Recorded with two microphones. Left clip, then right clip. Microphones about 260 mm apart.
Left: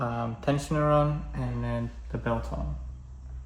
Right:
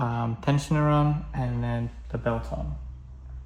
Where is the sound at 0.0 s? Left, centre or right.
Right.